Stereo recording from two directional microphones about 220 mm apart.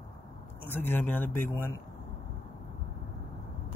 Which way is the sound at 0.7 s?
10° left (ahead or behind).